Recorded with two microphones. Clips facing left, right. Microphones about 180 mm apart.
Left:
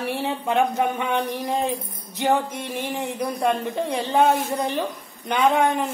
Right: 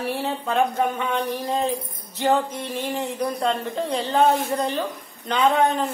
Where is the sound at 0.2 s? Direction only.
15° left (ahead or behind).